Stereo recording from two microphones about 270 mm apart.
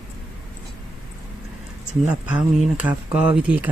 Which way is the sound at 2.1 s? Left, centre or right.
Centre.